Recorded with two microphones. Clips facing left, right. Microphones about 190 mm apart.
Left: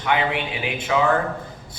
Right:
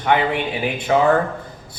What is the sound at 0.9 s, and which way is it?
Speech, 40° right (ahead or behind).